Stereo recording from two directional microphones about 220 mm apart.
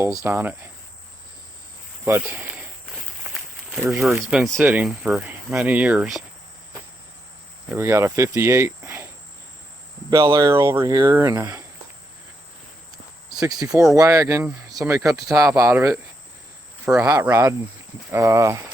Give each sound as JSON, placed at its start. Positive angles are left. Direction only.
{"t": 0.2, "sound": "speech", "side_deg": -10}
{"t": 2.0, "sound": "speech", "side_deg": -10}
{"t": 3.8, "sound": "speech", "side_deg": 0}
{"t": 7.7, "sound": "speech", "side_deg": -10}
{"t": 10.1, "sound": "speech", "side_deg": -15}
{"t": 13.3, "sound": "speech", "side_deg": -15}